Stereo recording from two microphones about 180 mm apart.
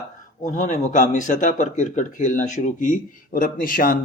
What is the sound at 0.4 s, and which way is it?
Speech, 40° left (ahead or behind).